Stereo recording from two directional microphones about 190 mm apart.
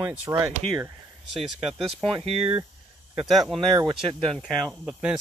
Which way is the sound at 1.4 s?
Centre (ahead or behind).